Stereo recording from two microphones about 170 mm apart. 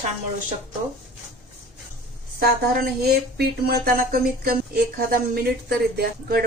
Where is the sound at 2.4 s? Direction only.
65° right (ahead or behind).